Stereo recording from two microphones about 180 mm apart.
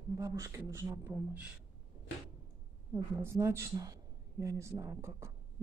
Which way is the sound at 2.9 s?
15° right (ahead or behind).